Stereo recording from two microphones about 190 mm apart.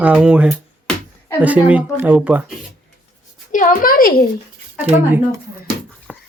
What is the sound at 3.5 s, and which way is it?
Speech, 45° left (ahead or behind).